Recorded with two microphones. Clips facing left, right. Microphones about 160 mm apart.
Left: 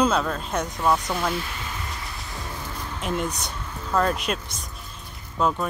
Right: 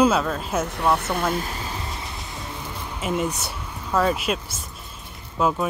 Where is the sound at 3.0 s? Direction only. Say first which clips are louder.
Right 3 dB; 5° right (ahead or behind).